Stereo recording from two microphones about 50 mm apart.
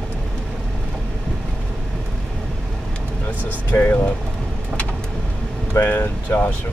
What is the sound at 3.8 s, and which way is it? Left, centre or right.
Speech, left.